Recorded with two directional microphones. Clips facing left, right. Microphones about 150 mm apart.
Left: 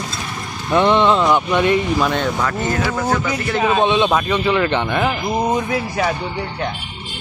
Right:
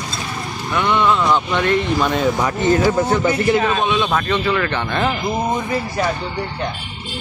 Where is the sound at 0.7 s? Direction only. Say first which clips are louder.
Left 3 dB; 30° left (ahead or behind).